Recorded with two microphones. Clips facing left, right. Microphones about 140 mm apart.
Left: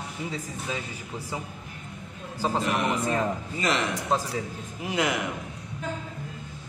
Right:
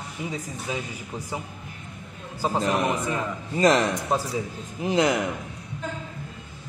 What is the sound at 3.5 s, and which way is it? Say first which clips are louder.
Speech: right 9 dB; 40° right (ahead or behind).